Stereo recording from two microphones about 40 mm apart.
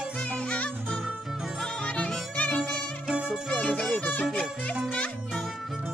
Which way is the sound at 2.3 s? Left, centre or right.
Left.